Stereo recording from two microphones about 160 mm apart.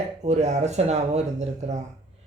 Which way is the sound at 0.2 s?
45° right (ahead or behind).